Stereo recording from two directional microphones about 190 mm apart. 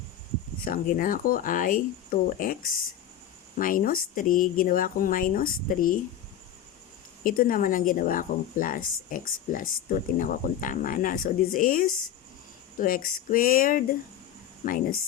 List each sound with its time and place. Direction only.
0.6 s a woman's voice: 50° left (ahead or behind)
7.3 s a woman's voice: 50° left (ahead or behind)